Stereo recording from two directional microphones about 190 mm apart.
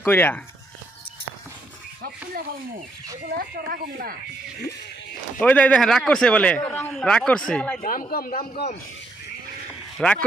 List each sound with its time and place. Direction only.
0.0 s speech: 10° left (ahead or behind)
2.0 s a sound: 50° right (ahead or behind)
3.3 s speech: 55° right (ahead or behind)
5.4 s a man's voice: 5° left (ahead or behind)
7.8 s a man's voice: 45° left (ahead or behind)
10.0 s a man's voice: 5° left (ahead or behind)